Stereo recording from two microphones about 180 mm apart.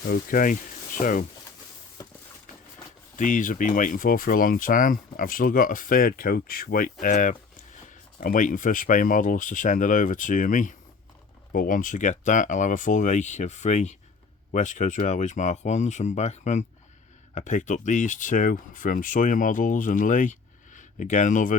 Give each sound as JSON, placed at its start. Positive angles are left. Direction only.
{"t": 0.1, "sound": "speech", "side_deg": 50}
{"t": 3.2, "sound": "speech", "side_deg": 45}